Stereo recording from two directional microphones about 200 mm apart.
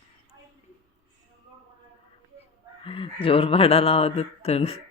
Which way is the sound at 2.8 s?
25° left (ahead or behind).